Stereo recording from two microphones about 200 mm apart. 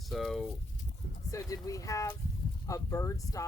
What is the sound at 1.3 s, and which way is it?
Speech, 15° left (ahead or behind).